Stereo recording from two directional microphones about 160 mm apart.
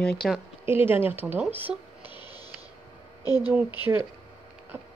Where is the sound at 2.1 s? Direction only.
30° left (ahead or behind).